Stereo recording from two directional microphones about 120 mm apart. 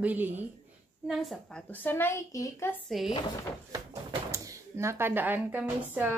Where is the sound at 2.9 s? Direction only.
Centre (ahead or behind).